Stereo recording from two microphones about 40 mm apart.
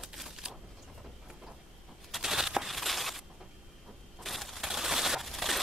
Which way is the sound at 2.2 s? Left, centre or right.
Centre.